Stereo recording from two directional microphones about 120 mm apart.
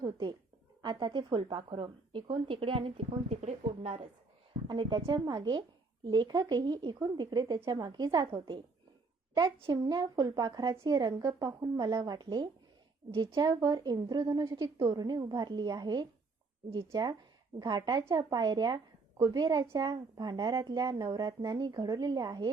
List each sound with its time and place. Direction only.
0.0 s a woman's voice: 35° right (ahead or behind); by 4.0 s 55° right (ahead or behind)
4.7 s a woman's voice: 40° right (ahead or behind)
9.7 s a woman's voice: 30° right (ahead or behind)